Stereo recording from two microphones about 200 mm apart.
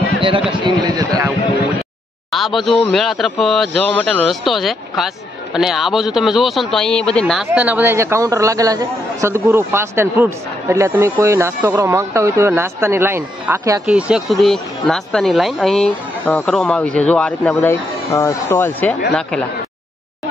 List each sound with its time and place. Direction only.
0.5 s speech: 20° right (ahead or behind)
2.3 s speech: centre (ahead or behind)